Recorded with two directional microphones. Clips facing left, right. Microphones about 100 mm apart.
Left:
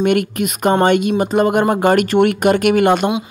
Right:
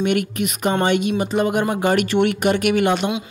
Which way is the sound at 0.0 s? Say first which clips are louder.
Left 4 dB; 50° left (ahead or behind).